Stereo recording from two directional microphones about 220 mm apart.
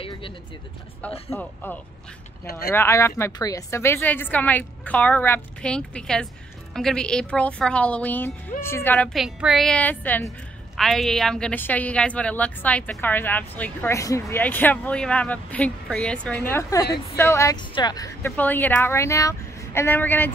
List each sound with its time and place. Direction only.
1.3 s a woman's voice: 10° left (ahead or behind)
16.8 s a woman's voice: 45° left (ahead or behind)
17.2 s a woman's voice: 10° left (ahead or behind)